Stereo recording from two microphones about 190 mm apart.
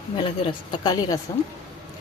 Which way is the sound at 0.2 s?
25° left (ahead or behind).